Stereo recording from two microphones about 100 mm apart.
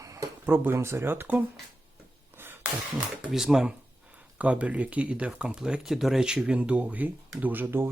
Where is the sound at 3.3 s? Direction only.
5° right (ahead or behind).